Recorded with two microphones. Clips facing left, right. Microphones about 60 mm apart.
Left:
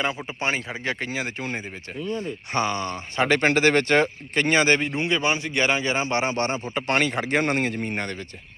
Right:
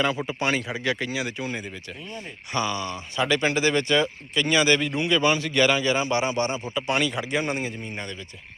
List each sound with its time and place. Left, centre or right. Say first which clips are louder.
0.3 s speech: right 1 dB; left
4.9 s a man's voice: right 1 dB; left
6.7 s speech: left 2 dB; left